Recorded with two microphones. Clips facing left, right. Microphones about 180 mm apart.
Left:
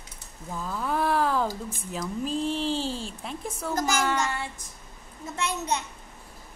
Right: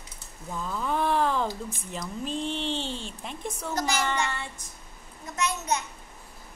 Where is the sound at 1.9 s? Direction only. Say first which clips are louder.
Left 3 dB; 5° left (ahead or behind).